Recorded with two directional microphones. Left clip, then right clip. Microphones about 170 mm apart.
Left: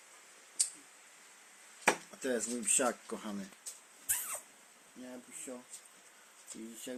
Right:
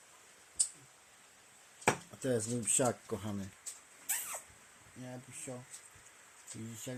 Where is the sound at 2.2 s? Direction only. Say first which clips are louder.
Right 3 dB; 15° right (ahead or behind).